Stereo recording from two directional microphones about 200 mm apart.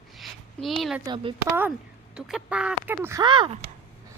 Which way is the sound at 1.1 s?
20° right (ahead or behind).